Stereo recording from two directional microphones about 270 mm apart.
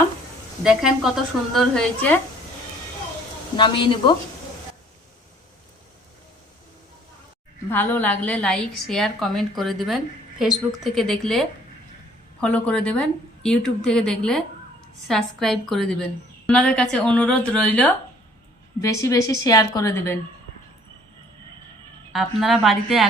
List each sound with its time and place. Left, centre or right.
0.6 s a woman's voice: centre
3.6 s a woman's voice: centre
7.7 s a woman's voice: centre
22.1 s a woman's voice: centre